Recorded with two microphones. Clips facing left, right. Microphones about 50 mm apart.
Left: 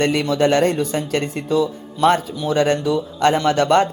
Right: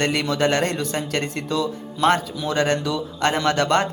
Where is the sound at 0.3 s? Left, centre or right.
Right.